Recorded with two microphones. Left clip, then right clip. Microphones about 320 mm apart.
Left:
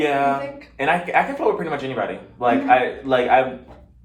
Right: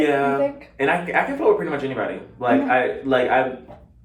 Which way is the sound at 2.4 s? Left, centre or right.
Centre.